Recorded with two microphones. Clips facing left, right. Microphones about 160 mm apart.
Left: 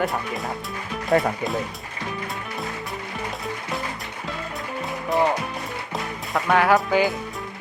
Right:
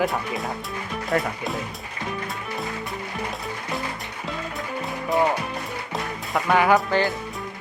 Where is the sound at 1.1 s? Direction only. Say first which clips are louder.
Left 4 dB; 20° left (ahead or behind).